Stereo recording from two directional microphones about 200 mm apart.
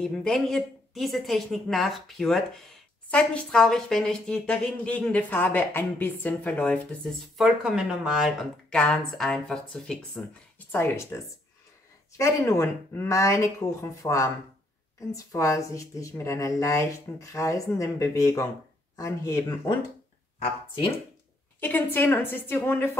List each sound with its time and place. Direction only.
0.0 s speech: 5° left (ahead or behind)
12.2 s speech: 15° left (ahead or behind)
21.5 s a woman's voice: 10° left (ahead or behind)